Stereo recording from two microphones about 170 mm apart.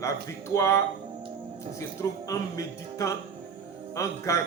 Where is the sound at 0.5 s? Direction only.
15° left (ahead or behind).